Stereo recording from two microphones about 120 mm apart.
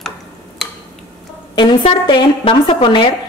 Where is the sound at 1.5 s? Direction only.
40° left (ahead or behind).